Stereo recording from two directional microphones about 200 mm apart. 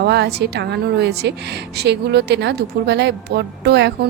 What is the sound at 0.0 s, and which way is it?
Speech, 55° right (ahead or behind).